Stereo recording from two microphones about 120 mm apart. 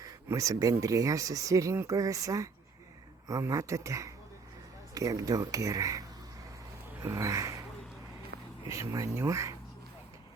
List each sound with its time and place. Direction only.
0.0 s speech: 25° right (ahead or behind)
7.0 s a sound: 25° right (ahead or behind)
8.6 s speech: 25° right (ahead or behind)